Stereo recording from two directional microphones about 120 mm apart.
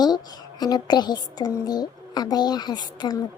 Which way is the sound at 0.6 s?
35° left (ahead or behind).